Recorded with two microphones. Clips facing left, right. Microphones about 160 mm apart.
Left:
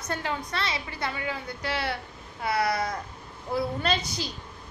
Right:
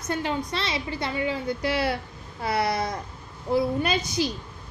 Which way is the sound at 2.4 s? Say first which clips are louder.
Right 1 dB; 30° right (ahead or behind).